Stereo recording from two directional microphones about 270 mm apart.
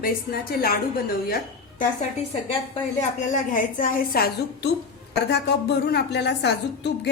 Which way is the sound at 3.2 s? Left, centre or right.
Left.